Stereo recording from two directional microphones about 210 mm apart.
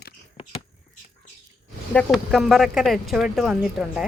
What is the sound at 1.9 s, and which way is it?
Speech, centre (ahead or behind).